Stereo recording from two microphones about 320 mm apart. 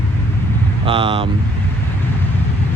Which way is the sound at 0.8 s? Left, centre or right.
Centre.